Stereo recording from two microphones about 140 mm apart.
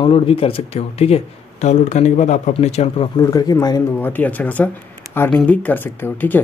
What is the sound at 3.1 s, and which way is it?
Speech, 25° left (ahead or behind).